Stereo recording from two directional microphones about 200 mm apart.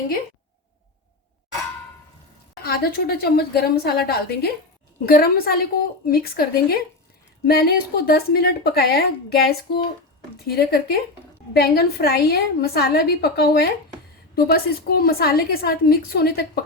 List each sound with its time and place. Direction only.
2.6 s a woman's voice: 50° left (ahead or behind)